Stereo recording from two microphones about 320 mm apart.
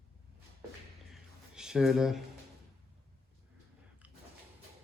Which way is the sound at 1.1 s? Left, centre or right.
Centre.